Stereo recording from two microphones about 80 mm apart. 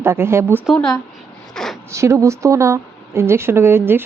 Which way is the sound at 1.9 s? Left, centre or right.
Right.